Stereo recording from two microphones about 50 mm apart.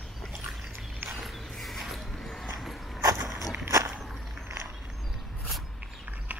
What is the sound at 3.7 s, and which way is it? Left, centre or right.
Walk, right.